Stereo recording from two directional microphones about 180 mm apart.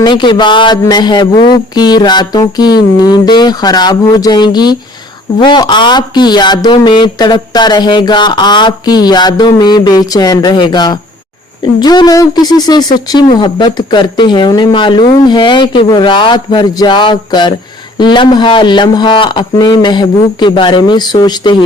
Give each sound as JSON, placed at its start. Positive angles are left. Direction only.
{"t": 0.0, "sound": "speech", "side_deg": 25}